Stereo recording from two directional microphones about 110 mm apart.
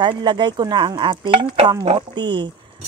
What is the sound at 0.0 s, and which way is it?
Speech, 45° right (ahead or behind).